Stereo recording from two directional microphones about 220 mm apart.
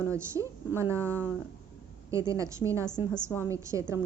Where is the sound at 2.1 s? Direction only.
15° right (ahead or behind).